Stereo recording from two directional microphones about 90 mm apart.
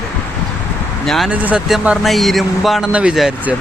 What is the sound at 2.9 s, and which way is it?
Speech, 15° right (ahead or behind).